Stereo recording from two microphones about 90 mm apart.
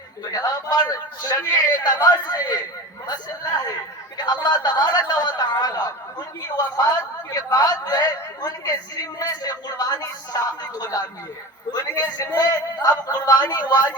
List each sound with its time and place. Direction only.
0.3 s a man's voice: 45° left (ahead or behind)
7.3 s a man's voice: 45° left (ahead or behind)